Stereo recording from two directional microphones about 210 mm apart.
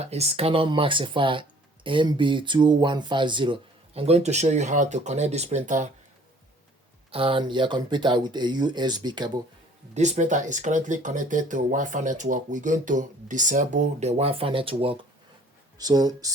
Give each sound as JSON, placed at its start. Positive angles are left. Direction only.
{"t": 0.0, "sound": "speech", "side_deg": -30}
{"t": 7.1, "sound": "speech", "side_deg": -25}
{"t": 9.9, "sound": "speech", "side_deg": -35}